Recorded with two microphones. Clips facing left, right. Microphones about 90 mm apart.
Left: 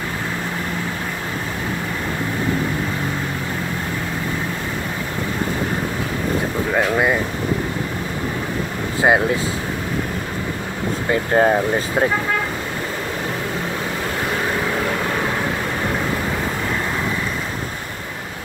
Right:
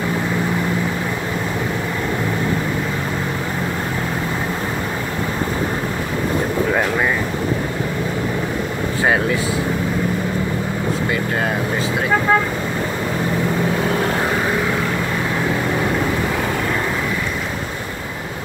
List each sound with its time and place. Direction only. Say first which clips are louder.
11.1 s speech: left 4 dB; 35° left (ahead or behind)